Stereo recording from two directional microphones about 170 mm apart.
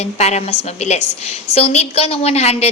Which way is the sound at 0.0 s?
40° left (ahead or behind).